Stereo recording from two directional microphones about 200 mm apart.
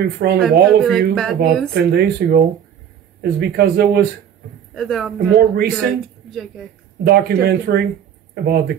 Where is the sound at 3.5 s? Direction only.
50° right (ahead or behind).